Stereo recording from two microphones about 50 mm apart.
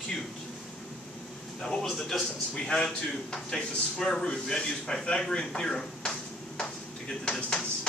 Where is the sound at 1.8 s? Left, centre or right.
Centre.